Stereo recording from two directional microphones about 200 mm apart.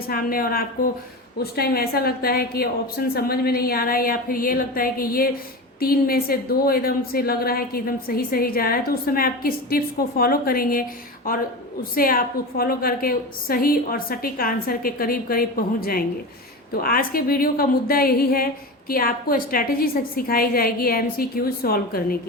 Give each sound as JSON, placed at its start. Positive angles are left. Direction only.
{"t": 0.1, "sound": "a woman's voice", "side_deg": 45}